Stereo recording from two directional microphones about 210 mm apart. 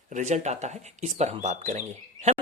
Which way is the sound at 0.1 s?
35° right (ahead or behind).